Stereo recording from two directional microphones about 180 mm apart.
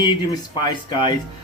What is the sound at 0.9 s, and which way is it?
Speech, 25° left (ahead or behind).